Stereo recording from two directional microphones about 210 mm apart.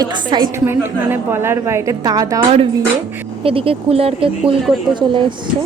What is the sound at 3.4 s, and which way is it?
A woman's voice, 25° right (ahead or behind).